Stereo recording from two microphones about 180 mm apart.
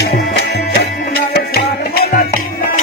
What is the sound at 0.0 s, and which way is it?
Music, 65° left (ahead or behind).